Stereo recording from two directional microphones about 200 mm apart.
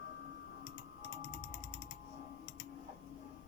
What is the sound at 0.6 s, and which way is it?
Mechanisms, 60° left (ahead or behind).